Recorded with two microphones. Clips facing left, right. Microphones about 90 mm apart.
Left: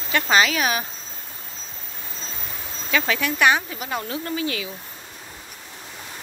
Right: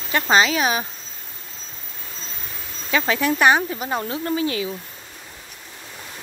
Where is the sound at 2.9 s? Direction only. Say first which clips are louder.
Right 3 dB; 25° right (ahead or behind).